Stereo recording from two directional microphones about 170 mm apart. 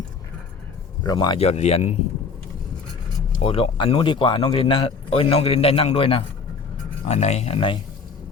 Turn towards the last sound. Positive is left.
turn(degrees=35)  # may be behind; listen again after turning